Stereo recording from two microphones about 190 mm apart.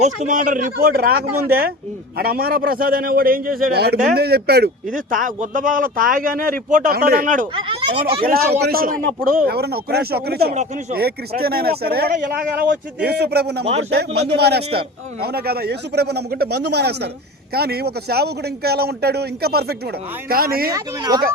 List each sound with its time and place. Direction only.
0.0 s speech: 40° right (ahead or behind)
7.5 s speech: 30° right (ahead or behind)
8.2 s a man's voice: 50° right (ahead or behind)
20.7 s speech: 20° right (ahead or behind)